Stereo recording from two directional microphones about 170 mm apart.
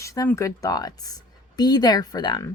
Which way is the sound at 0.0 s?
20° left (ahead or behind).